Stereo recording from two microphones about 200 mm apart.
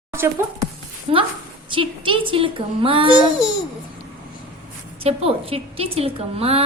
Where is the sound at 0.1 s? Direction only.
10° right (ahead or behind).